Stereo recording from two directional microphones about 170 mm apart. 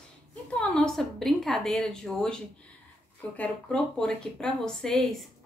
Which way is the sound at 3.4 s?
5° left (ahead or behind).